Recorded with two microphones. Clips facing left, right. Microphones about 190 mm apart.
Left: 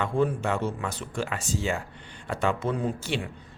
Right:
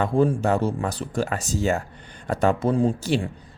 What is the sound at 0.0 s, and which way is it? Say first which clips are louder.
Speech: right 5 dB; 35° right (ahead or behind).